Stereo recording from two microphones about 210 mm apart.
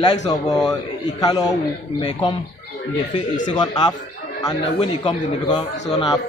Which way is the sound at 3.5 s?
20° left (ahead or behind).